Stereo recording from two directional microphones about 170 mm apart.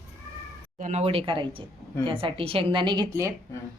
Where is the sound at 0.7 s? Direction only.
45° right (ahead or behind); by 3.0 s 30° right (ahead or behind).